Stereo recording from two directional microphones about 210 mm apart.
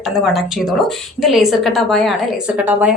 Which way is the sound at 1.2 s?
Centre (ahead or behind).